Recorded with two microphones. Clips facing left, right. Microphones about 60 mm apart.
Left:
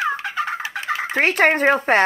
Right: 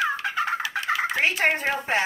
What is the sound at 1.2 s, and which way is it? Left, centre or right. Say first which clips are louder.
Speech: left 10 dB; left.